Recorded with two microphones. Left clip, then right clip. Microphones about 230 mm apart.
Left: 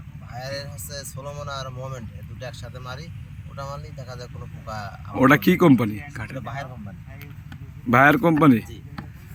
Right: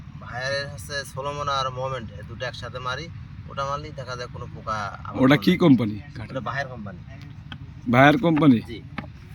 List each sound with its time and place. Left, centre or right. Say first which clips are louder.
0.3 s vehicle: right 5 dB; centre
0.9 s a man's voice: right 6 dB; centre
7.9 s speech: left 1 dB; centre